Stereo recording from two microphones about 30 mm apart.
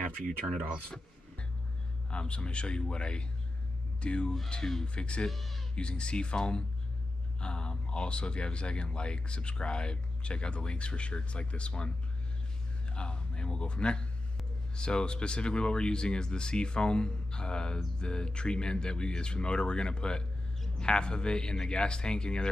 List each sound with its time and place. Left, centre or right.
0.8 s a sound: left
2.0 s speech: left
5.3 s speech: centre
5.8 s speech: left
12.9 s a man's voice: left